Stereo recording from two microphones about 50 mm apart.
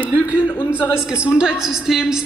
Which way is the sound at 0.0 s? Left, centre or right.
Left.